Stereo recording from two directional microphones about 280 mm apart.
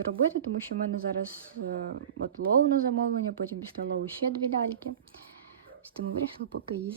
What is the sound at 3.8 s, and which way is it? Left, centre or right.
Speech, right.